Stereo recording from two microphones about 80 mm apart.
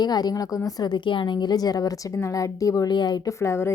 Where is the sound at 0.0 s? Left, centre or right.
Left.